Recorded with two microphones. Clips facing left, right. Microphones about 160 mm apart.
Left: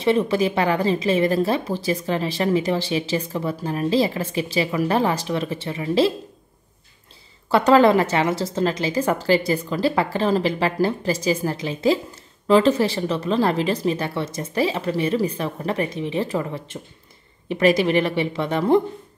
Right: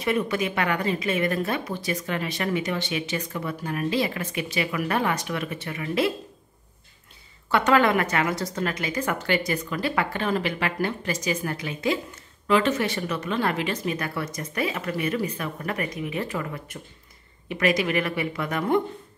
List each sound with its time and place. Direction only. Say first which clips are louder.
0.0 s speech: left 6 dB; 30° left (ahead or behind)
7.4 s speech: left 6 dB; 30° left (ahead or behind)